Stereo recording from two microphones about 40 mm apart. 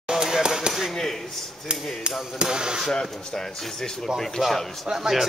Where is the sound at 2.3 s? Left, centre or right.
Centre.